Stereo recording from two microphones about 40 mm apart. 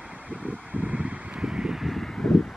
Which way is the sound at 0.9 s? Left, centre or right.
Right.